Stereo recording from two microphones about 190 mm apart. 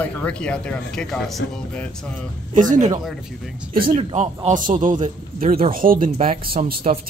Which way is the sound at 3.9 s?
30° right (ahead or behind).